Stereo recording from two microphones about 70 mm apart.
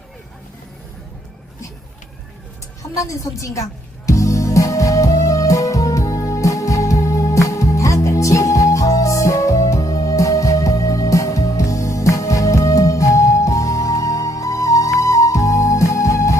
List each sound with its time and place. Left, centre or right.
2.9 s music: left